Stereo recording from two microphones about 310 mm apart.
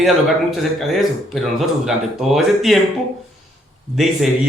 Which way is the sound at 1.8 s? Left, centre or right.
Centre.